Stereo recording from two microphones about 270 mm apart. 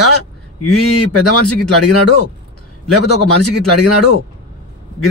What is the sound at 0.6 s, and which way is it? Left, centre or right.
A man's voice, left.